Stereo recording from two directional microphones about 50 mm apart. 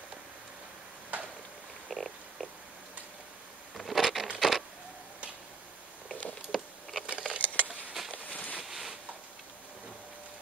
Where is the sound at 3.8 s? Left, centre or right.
Centre.